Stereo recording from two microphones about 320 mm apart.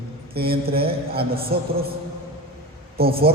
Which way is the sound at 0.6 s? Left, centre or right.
Right.